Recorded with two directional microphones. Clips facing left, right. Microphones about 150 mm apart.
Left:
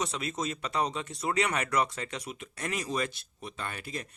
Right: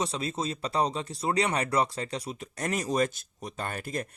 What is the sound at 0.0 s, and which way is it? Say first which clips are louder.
Speech: right 2 dB; 30° right (ahead or behind).